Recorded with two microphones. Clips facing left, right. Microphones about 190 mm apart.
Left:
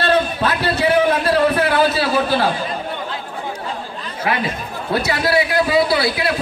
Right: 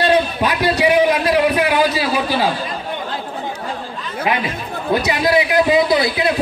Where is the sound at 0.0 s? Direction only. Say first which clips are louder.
Right 2 dB; 15° right (ahead or behind).